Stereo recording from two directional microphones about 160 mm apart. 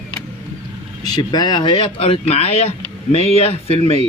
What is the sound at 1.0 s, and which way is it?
Speech, 25° left (ahead or behind).